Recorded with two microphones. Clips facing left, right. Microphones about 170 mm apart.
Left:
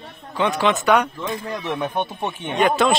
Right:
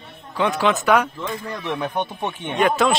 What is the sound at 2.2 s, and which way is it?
Speech, centre (ahead or behind).